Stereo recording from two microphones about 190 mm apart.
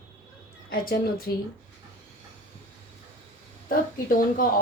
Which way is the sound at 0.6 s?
50° left (ahead or behind).